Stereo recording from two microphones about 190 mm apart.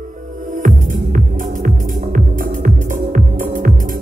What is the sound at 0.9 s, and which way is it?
Music, 45° right (ahead or behind).